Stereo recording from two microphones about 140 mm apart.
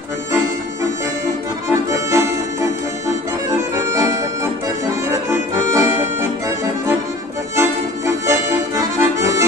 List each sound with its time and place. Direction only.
1.7 s music: 20° right (ahead or behind)
3.7 s accordion: 20° right (ahead or behind)
5.8 s accordion: 20° right (ahead or behind)
7.5 s accordion: 20° right (ahead or behind)